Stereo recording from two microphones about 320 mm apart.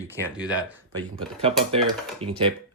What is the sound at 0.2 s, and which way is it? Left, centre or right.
Speech, centre.